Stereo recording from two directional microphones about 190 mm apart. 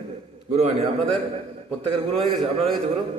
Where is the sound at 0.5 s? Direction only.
35° right (ahead or behind).